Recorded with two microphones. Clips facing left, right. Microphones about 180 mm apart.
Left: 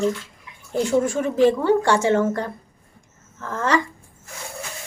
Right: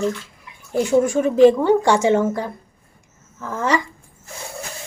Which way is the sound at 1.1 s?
15° right (ahead or behind).